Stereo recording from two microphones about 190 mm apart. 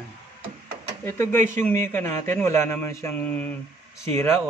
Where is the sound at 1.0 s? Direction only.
10° left (ahead or behind).